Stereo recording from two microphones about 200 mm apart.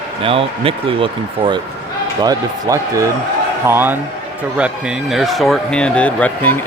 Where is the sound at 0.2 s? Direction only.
25° right (ahead or behind).